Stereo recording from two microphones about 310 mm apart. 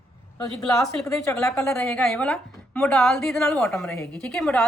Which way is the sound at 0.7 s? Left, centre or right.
Centre.